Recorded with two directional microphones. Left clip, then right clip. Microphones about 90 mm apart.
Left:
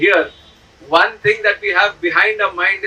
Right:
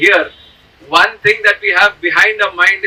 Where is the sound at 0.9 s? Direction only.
15° left (ahead or behind).